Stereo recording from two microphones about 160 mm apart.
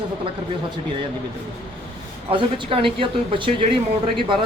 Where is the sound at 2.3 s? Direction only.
35° right (ahead or behind).